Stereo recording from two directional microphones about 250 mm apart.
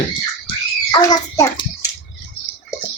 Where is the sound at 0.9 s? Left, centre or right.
Centre.